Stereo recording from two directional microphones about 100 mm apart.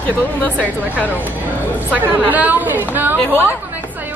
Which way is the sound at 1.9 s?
15° right (ahead or behind).